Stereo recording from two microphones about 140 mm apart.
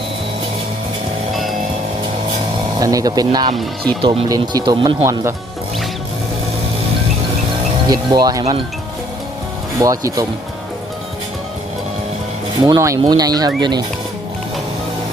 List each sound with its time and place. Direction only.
2.8 s speech: 25° right (ahead or behind)
3.5 s speech: centre (ahead or behind)
4.0 s speech: 40° right (ahead or behind)
4.3 s speech: 30° right (ahead or behind)
5.0 s speech: 20° right (ahead or behind)
7.9 s speech: 30° right (ahead or behind)
9.8 s speech: 25° right (ahead or behind)
12.6 s speech: 25° right (ahead or behind)